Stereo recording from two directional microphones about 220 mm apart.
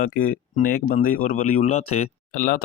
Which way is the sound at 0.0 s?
40° left (ahead or behind).